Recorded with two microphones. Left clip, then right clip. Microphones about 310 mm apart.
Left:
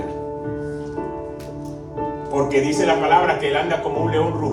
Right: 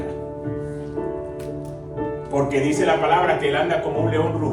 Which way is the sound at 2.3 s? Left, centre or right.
Left.